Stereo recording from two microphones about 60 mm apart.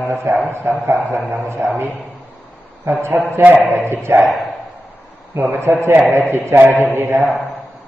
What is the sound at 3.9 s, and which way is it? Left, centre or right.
Speech, right.